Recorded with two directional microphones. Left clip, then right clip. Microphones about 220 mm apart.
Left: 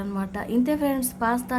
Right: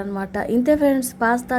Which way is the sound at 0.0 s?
15° right (ahead or behind).